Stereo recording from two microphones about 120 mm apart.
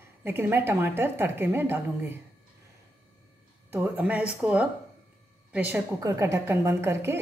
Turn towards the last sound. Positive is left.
turn(degrees=-20)  # may be behind; listen again after turning